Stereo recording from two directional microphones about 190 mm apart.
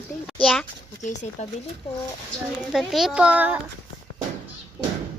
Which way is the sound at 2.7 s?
Centre (ahead or behind).